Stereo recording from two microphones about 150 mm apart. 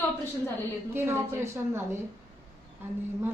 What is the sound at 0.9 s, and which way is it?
Speech, 15° right (ahead or behind).